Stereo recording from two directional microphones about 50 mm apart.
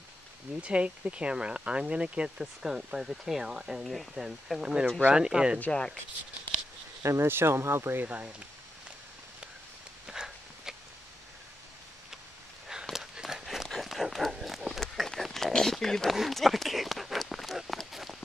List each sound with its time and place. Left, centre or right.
0.6 s speech: right
3.8 s speech: centre
5.1 s speech: centre
5.7 s speech: centre
7.0 s speech: right
7.2 s speech: right
7.5 s speech: right
8.0 s speech: right
10.0 s a sound: centre
12.9 s a sound: centre
13.7 s run: centre
15.2 s a sound: centre
16.2 s run: centre